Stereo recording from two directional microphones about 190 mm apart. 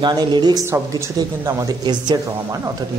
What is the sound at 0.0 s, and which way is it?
Speech, 20° right (ahead or behind).